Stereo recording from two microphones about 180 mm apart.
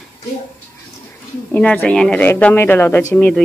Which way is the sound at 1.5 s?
10° left (ahead or behind).